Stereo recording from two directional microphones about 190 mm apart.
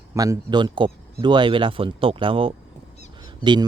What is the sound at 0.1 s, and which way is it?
Speech, 20° right (ahead or behind).